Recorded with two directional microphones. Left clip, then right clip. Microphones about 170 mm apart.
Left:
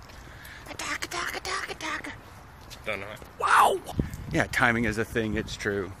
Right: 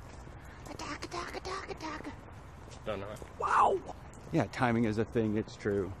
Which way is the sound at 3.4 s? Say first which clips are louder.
Left 6 dB; 10° left (ahead or behind).